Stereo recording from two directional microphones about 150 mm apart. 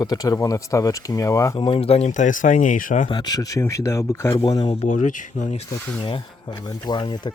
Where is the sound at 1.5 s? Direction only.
35° left (ahead or behind); by 3.1 s 60° left (ahead or behind).